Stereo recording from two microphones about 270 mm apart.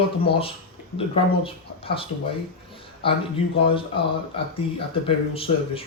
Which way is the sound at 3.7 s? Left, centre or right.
Centre.